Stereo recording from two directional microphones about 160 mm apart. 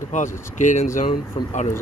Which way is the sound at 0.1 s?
50° left (ahead or behind).